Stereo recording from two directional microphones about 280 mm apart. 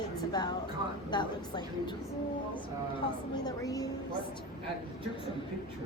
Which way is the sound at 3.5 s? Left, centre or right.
Centre.